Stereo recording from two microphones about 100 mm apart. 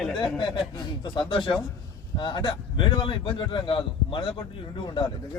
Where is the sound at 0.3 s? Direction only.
50° left (ahead or behind).